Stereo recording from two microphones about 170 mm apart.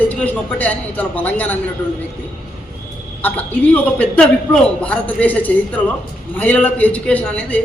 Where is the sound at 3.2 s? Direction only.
10° left (ahead or behind).